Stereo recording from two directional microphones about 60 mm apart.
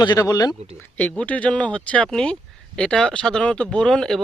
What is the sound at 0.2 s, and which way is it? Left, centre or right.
Speech, left.